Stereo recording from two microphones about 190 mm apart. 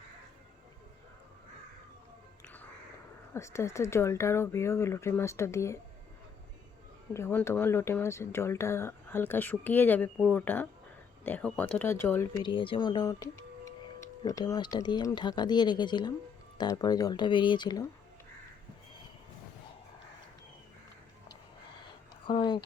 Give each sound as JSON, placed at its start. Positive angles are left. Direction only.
{"t": 3.3, "sound": "speech", "side_deg": 15}
{"t": 7.1, "sound": "speech", "side_deg": 15}
{"t": 12.4, "sound": "speech", "side_deg": 25}
{"t": 22.3, "sound": "speech", "side_deg": 25}